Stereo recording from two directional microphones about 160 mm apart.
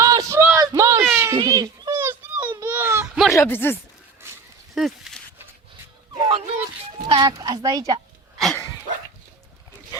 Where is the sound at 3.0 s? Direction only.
5° right (ahead or behind).